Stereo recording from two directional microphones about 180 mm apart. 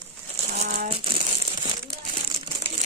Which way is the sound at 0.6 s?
50° right (ahead or behind).